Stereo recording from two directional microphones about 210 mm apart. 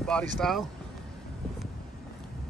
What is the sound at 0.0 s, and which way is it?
Speech, 5° left (ahead or behind).